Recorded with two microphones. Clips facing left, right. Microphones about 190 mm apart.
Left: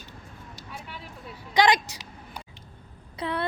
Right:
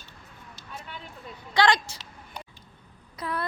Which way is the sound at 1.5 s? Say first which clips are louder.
Left 1 dB; 15° left (ahead or behind).